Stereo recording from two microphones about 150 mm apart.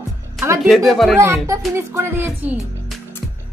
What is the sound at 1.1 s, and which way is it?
Speech, 20° right (ahead or behind).